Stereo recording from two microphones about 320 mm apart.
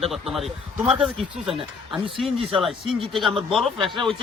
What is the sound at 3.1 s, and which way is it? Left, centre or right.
A man's voice, centre.